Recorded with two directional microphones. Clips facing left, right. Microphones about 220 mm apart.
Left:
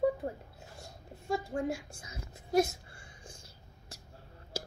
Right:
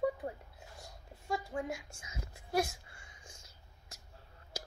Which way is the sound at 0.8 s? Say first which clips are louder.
Left 4 dB; 25° left (ahead or behind).